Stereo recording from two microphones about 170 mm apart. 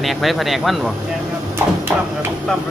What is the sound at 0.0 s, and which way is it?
Speech, centre (ahead or behind).